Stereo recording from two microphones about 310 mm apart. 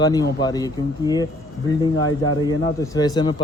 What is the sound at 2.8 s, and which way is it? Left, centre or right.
Speech, centre.